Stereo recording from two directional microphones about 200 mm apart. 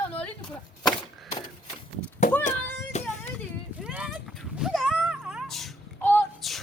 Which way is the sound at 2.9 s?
35° left (ahead or behind).